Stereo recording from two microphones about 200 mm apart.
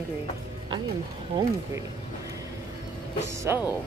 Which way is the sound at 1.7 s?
15° right (ahead or behind).